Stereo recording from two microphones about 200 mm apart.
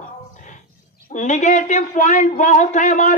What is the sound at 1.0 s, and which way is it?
A man's voice, 40° left (ahead or behind).